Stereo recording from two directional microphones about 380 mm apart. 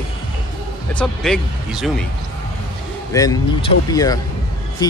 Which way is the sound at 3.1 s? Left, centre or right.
Centre.